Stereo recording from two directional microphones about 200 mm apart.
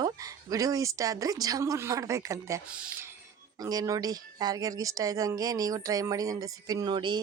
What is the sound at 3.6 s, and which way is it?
Speech, 20° right (ahead or behind).